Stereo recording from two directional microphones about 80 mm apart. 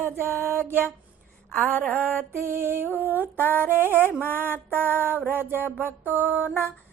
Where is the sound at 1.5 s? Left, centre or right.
Centre.